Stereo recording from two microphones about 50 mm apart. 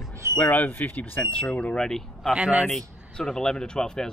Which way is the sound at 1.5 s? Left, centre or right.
Left.